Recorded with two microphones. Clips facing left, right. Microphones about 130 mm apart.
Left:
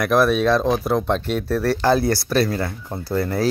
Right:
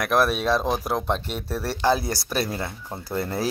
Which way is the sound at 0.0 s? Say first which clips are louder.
Left 5 dB; 5° right (ahead or behind).